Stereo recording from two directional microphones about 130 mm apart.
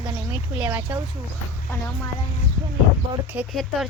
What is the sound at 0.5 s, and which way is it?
Speech, 25° right (ahead or behind).